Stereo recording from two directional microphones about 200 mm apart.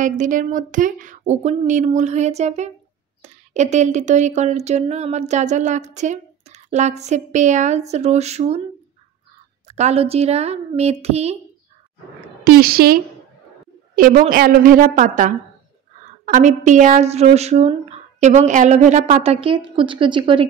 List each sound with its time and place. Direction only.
0.0 s speech: 40° right (ahead or behind)
9.7 s speech: 35° right (ahead or behind)
12.4 s speech: 50° right (ahead or behind)
16.3 s speech: 40° right (ahead or behind)